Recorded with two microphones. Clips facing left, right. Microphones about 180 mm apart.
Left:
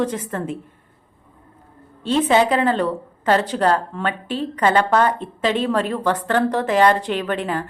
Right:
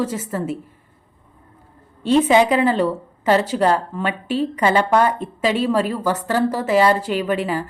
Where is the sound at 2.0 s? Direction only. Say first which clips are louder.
Right 2 dB; 10° right (ahead or behind).